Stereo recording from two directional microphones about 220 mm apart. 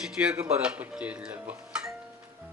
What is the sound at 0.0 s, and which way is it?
Speech, 5° right (ahead or behind).